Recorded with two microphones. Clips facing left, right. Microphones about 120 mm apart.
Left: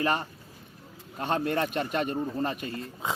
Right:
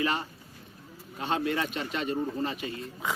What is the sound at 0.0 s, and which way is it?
A man's voice, 45° left (ahead or behind).